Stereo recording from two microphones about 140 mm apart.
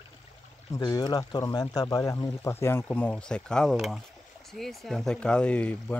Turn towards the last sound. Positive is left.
turn(degrees=10)  # may be behind; listen again after turning